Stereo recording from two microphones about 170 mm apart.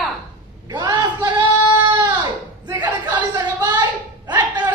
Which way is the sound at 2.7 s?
25° right (ahead or behind).